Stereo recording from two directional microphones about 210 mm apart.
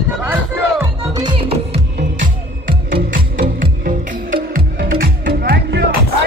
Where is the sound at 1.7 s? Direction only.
40° right (ahead or behind).